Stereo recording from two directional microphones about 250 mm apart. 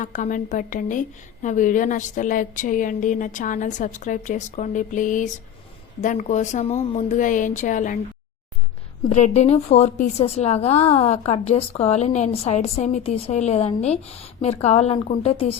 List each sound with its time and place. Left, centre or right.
0.0 s a woman's voice: left
9.0 s a woman's voice: left